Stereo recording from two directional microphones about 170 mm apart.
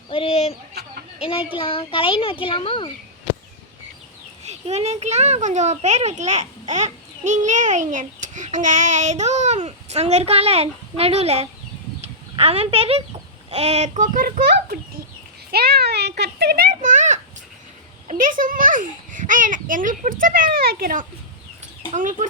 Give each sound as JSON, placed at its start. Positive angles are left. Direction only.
{"t": 0.1, "sound": "a sound", "side_deg": 35}
{"t": 1.2, "sound": "a child's voice", "side_deg": 35}
{"t": 4.4, "sound": "a child's voice", "side_deg": -40}
{"t": 21.9, "sound": "a child's voice", "side_deg": -50}